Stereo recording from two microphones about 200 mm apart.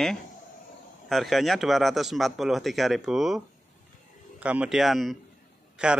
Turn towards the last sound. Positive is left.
turn(degrees=-5)  # may be behind; listen again after turning